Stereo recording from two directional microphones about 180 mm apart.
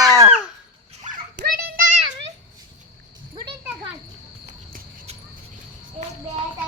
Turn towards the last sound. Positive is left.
turn(degrees=-40)  # may be behind; listen again after turning